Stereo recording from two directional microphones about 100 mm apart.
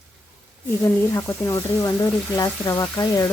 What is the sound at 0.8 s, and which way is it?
Speech, 25° left (ahead or behind).